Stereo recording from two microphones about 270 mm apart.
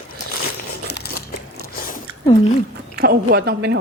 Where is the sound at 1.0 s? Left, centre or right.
Left.